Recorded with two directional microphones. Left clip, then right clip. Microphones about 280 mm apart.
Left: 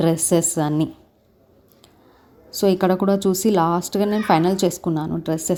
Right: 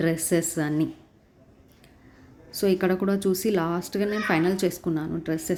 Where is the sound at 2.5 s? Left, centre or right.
Centre.